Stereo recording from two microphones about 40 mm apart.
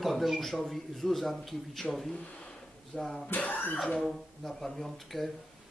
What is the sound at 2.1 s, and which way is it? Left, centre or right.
Speech, left.